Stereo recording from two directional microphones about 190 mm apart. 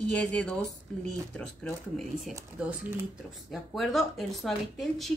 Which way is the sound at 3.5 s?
Centre (ahead or behind).